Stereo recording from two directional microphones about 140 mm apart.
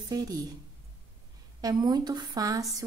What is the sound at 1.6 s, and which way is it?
A woman's voice, 30° right (ahead or behind).